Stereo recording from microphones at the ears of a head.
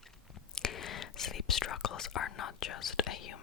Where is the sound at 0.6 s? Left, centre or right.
Left.